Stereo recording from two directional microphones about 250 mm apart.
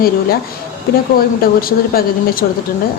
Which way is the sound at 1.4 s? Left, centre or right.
Left.